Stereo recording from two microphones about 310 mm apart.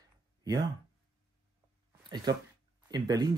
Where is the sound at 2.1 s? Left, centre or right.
Centre.